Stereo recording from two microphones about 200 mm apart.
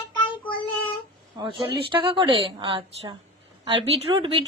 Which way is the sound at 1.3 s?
25° right (ahead or behind).